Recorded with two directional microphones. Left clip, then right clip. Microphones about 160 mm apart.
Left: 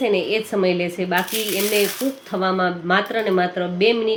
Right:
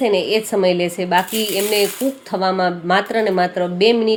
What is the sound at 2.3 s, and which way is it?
Speech, 30° right (ahead or behind).